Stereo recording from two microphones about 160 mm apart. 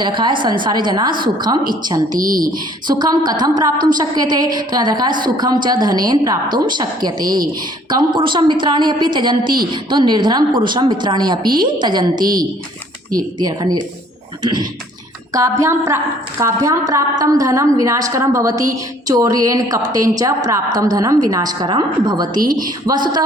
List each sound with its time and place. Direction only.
0.0 s a woman's voice: 30° right (ahead or behind)
2.1 s speech: 60° right (ahead or behind)
2.8 s a woman's voice: 25° right (ahead or behind)
13.4 s a woman's voice: 25° right (ahead or behind)